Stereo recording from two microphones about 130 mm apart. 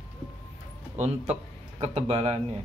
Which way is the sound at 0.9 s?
55° right (ahead or behind).